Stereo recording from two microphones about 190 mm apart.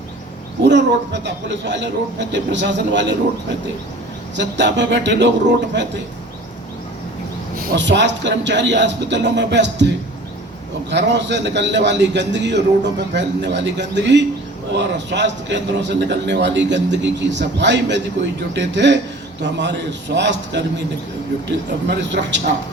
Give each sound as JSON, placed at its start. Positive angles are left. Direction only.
{"t": 0.6, "sound": "a man's voice", "side_deg": -70}
{"t": 4.4, "sound": "a man's voice", "side_deg": -70}
{"t": 7.8, "sound": "a man's voice", "side_deg": -70}
{"t": 21.8, "sound": "a man's voice", "side_deg": -70}